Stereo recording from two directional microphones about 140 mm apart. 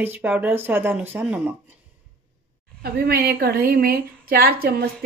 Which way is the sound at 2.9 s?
90° right.